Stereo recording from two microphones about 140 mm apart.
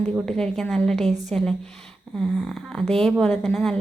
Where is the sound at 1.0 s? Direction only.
55° right (ahead or behind).